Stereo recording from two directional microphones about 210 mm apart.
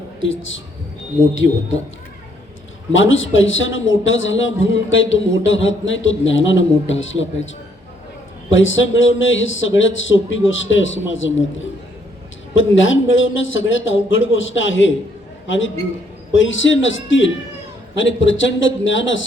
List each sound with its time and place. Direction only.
2.9 s a man's voice: 65° left (ahead or behind)
8.4 s a man's voice: 65° left (ahead or behind)